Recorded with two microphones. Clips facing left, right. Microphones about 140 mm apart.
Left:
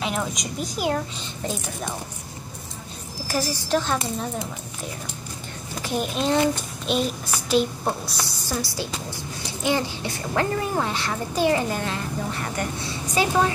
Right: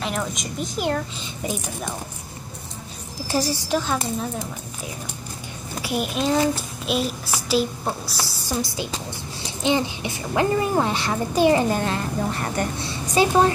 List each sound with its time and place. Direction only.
0.0 s a child's voice: centre (ahead or behind)
3.6 s a child's voice: 5° right (ahead or behind)
5.8 s a child's voice: 5° right (ahead or behind)
8.5 s a woman's voice: 15° right (ahead or behind)
11.7 s a woman's voice: 40° right (ahead or behind)
13.1 s speech: 25° right (ahead or behind)